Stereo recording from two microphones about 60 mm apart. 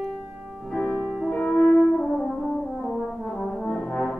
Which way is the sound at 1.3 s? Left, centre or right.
Centre.